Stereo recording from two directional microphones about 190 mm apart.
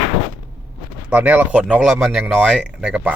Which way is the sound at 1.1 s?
10° right (ahead or behind).